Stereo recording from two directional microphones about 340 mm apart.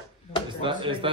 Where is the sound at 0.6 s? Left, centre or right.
Centre.